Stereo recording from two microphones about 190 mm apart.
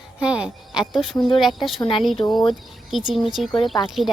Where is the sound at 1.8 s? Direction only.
25° left (ahead or behind).